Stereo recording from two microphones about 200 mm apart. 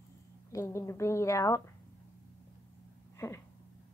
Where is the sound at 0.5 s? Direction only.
15° left (ahead or behind).